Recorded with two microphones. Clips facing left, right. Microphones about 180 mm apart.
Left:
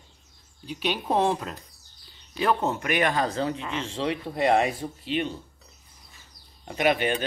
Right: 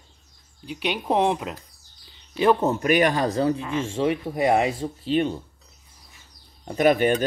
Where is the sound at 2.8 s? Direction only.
40° right (ahead or behind).